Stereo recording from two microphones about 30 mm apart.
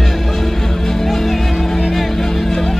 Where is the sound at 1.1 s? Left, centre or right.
Centre.